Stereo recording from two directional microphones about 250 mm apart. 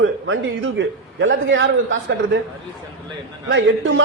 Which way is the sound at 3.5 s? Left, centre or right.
Right.